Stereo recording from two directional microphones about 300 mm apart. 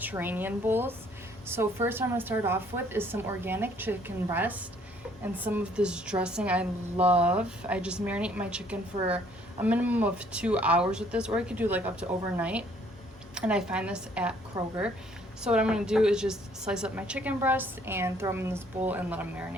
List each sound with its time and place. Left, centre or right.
0.0 s a woman's voice: centre